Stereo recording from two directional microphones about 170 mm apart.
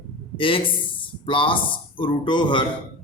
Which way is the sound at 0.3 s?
30° left (ahead or behind).